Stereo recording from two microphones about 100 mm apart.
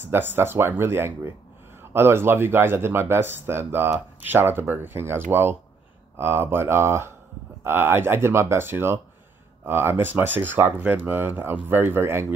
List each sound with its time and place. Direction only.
0.0 s speech: 20° right (ahead or behind)